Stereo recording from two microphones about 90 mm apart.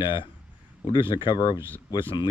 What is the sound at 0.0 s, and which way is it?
Speech, 60° left (ahead or behind).